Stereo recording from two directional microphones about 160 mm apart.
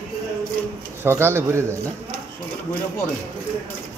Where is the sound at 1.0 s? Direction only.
15° right (ahead or behind).